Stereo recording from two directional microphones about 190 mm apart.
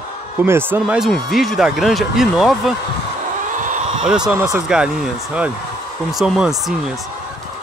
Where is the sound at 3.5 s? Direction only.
45° right (ahead or behind).